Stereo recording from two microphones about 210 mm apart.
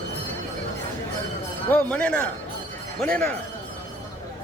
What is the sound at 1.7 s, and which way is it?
Speech, 5° left (ahead or behind).